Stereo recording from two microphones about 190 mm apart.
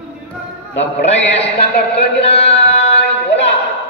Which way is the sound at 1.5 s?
60° left (ahead or behind).